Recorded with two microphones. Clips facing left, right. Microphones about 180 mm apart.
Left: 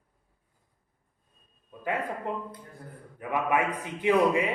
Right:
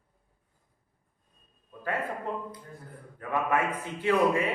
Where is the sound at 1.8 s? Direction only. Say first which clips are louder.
Left 1 dB; 15° left (ahead or behind).